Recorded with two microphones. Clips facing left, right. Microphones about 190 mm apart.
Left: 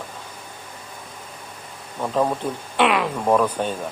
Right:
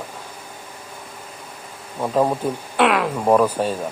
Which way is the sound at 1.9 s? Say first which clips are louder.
Right 2 dB; 10° right (ahead or behind).